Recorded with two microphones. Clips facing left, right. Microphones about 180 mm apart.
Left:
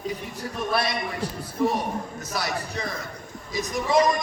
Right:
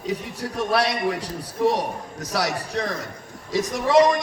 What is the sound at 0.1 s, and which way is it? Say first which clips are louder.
A man's voice: right 4 dB; 80° right.